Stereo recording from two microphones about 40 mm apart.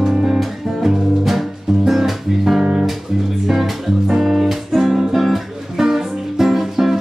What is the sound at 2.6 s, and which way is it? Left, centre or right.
Music, right.